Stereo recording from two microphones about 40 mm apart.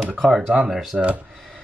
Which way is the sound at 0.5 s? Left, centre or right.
Centre.